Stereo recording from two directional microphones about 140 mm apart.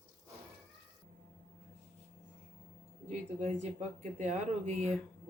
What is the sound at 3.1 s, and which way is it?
Speech, 60° right (ahead or behind).